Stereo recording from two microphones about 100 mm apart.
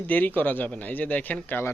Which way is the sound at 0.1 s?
15° left (ahead or behind).